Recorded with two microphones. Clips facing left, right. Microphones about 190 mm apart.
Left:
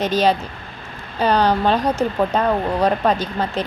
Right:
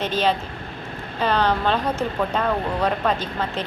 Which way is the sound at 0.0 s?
40° left (ahead or behind).